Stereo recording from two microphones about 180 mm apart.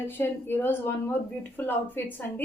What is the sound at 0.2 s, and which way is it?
A woman's voice, 10° left (ahead or behind).